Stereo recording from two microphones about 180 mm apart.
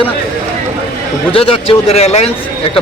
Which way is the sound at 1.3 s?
30° left (ahead or behind).